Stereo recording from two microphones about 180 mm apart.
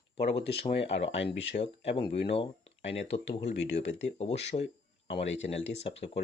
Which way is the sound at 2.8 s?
85° left.